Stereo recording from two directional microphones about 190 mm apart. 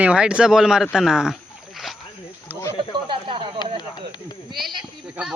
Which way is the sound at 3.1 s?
25° right (ahead or behind).